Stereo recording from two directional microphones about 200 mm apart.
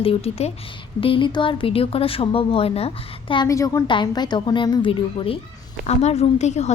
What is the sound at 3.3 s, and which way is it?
A woman's voice, 20° left (ahead or behind).